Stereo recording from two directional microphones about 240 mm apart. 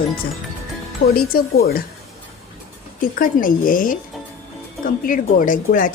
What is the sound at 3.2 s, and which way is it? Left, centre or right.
Speech, left.